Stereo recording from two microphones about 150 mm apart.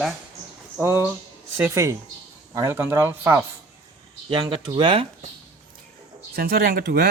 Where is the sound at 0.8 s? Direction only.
15° right (ahead or behind).